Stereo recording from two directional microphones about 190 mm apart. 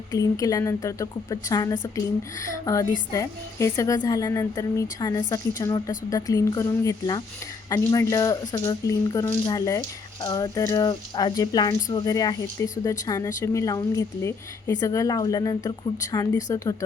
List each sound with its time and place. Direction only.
0.1 s speech: 15° left (ahead or behind)